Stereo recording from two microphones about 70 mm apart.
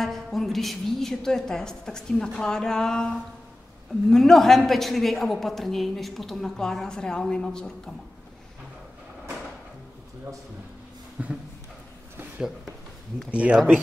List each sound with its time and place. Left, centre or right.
0.0 s a woman's voice: centre
11.2 s speech: centre
12.4 s speech: centre
13.3 s speech: centre